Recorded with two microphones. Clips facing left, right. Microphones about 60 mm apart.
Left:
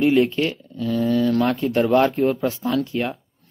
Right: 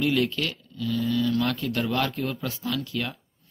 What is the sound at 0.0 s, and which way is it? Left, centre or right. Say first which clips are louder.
Speech: left 7 dB; left.